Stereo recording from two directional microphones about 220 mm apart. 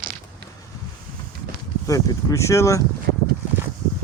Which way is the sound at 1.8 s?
15° left (ahead or behind).